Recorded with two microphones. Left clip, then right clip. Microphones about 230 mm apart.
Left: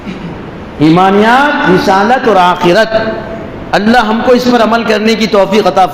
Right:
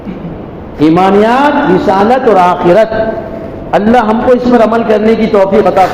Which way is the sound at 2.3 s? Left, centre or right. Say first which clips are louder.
Even; left.